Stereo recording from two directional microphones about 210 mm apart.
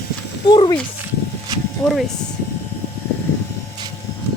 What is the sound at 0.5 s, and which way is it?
Speech, 25° left (ahead or behind).